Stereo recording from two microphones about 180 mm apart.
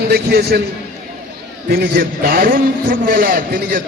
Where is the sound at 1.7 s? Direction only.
60° right (ahead or behind).